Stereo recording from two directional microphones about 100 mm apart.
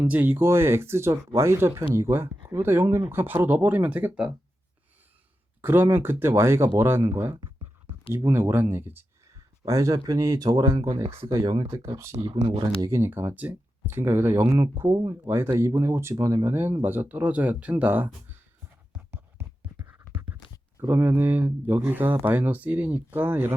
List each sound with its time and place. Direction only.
0.0 s speech: 20° right (ahead or behind)
5.6 s speech: 20° right (ahead or behind)
11.0 s speech: 85° right
11.3 s speech: 35° right (ahead or behind)
11.6 s speech: 75° right (ahead or behind)
12.8 s speech: 25° right (ahead or behind)
16.1 s speech: 40° right (ahead or behind)
16.4 s speech: 25° right (ahead or behind)
19.1 s a sound: 20° right (ahead or behind)
20.8 s speech: 20° right (ahead or behind)